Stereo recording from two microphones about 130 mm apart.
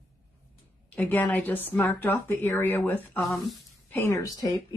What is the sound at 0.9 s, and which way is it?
A woman's voice, 15° left (ahead or behind).